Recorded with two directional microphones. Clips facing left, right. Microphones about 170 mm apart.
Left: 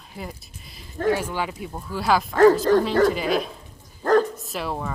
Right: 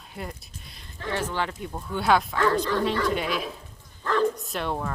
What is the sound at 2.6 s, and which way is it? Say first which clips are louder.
Speech: left 7 dB; 45° left (ahead or behind).